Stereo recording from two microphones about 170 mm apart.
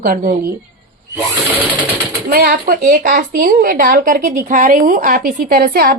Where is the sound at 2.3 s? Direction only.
60° right (ahead or behind).